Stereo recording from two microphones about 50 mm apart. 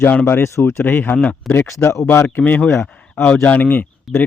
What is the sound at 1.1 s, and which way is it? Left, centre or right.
Speech, left.